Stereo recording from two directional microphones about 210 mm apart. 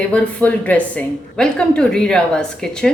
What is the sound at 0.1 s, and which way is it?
A woman's voice, 5° left (ahead or behind).